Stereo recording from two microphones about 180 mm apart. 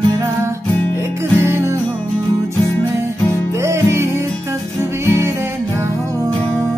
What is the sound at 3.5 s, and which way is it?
Music, 15° right (ahead or behind).